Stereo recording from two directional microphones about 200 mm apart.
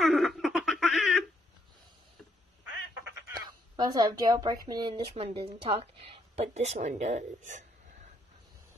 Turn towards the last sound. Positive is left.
turn(degrees=-35)  # may be behind; listen again after turning